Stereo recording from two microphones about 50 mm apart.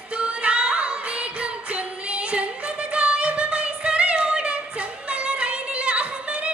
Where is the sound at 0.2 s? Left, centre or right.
Right.